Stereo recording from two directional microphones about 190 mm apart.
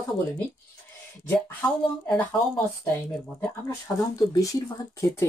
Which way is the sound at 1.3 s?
10° left (ahead or behind).